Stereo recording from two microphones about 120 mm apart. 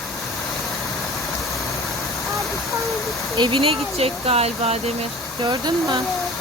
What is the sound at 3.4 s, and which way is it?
Speech, 45° right (ahead or behind).